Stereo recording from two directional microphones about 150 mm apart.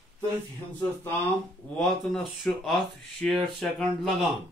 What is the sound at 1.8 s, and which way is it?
Speech, centre (ahead or behind).